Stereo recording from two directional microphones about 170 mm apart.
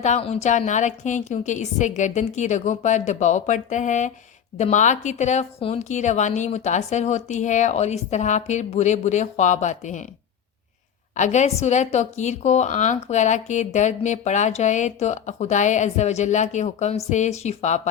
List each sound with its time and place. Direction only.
0.0 s a woman's voice: 40° left (ahead or behind)
11.2 s a woman's voice: 45° left (ahead or behind)